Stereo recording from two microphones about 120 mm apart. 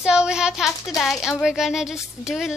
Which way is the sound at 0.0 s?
5° right (ahead or behind).